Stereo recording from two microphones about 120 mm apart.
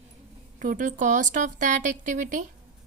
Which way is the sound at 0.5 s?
90° right.